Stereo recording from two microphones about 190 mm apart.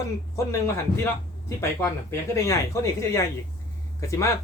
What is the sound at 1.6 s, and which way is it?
Speech, 15° left (ahead or behind).